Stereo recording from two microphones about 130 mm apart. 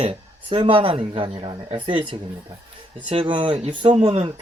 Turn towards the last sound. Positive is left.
turn(degrees=-45)  # may be behind; listen again after turning